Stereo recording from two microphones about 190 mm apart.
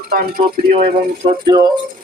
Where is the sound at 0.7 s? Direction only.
30° right (ahead or behind).